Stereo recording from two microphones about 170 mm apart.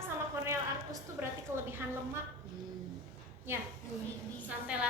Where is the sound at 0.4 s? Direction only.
15° right (ahead or behind).